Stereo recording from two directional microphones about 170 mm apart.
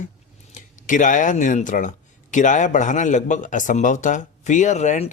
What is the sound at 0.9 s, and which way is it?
Speech, 50° left (ahead or behind).